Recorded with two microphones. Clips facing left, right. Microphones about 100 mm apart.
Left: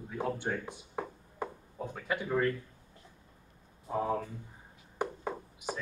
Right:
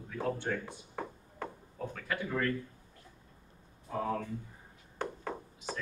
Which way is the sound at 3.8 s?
20° left (ahead or behind).